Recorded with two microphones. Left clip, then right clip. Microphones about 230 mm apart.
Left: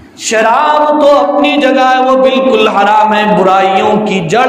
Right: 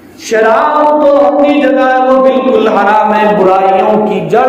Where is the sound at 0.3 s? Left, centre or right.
Left.